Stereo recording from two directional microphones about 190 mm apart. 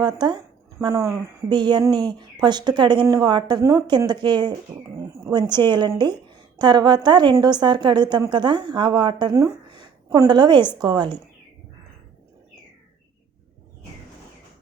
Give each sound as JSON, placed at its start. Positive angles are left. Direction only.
{"t": 0.0, "sound": "a woman's voice", "side_deg": -20}